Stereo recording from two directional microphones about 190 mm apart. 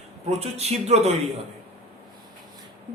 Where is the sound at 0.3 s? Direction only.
35° right (ahead or behind).